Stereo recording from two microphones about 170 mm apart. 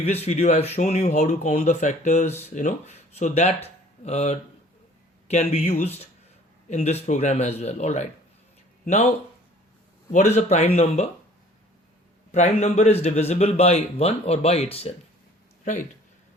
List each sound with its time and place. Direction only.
0.0 s speech: 40° left (ahead or behind)
10.1 s speech: 45° left (ahead or behind)
12.3 s speech: 40° left (ahead or behind)